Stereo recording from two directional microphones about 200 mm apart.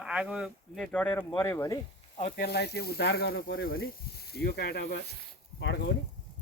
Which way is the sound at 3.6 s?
50° left (ahead or behind).